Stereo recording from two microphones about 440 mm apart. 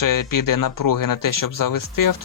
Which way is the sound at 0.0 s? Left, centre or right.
Left.